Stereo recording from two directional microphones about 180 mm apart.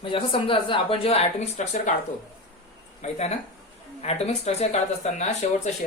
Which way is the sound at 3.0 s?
35° left (ahead or behind).